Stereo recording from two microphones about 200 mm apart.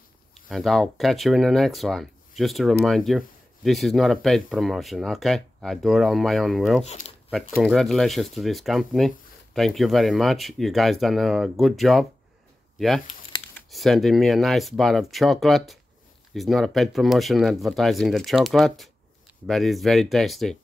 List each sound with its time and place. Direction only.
0.5 s speech: centre (ahead or behind)